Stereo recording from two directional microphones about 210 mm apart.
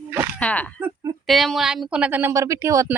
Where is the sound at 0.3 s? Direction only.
5° left (ahead or behind).